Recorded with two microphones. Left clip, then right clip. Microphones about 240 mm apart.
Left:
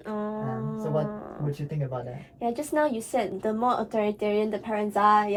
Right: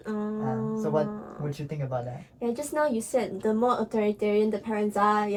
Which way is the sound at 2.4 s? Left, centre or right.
Centre.